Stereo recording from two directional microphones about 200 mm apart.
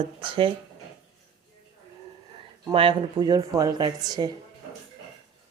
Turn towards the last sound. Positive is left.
turn(degrees=-20)  # may be behind; listen again after turning